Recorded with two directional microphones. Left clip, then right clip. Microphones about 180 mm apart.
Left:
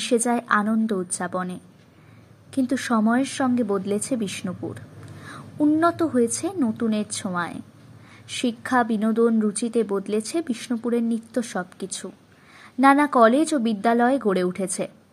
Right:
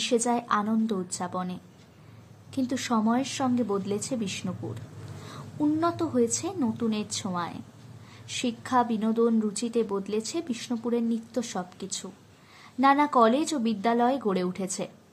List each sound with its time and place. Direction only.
0.0 s a woman's voice: 15° left (ahead or behind)